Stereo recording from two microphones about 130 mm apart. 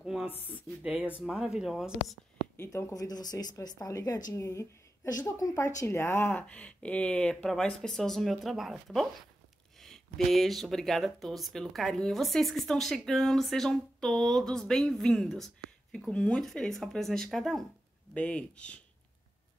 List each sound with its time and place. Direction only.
0.0 s a sound: 5° right (ahead or behind)
0.5 s speech: 10° right (ahead or behind)
2.5 s speech: 20° left (ahead or behind)